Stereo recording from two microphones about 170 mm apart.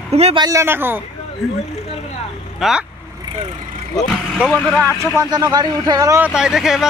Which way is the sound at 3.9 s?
Centre (ahead or behind).